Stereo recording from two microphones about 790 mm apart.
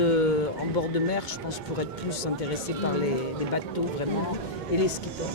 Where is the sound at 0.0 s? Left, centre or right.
Left.